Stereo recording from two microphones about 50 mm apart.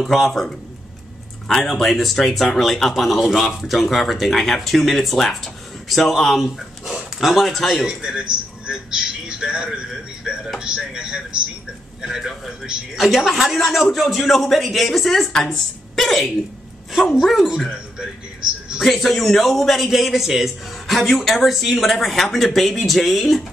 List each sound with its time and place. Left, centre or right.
0.0 s a man's voice: centre
7.8 s a man's voice: centre
17.6 s a sound: centre
18.8 s a man's voice: centre